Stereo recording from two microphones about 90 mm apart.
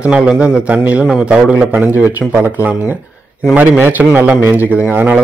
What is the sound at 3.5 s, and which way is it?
A man's voice, 15° right (ahead or behind).